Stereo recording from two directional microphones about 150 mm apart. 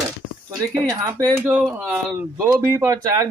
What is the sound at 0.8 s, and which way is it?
Speech, 20° right (ahead or behind).